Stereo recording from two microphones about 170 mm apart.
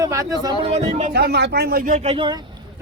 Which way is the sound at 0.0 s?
20° right (ahead or behind).